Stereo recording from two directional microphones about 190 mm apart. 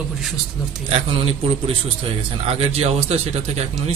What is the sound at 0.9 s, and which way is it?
A man's voice, 30° right (ahead or behind).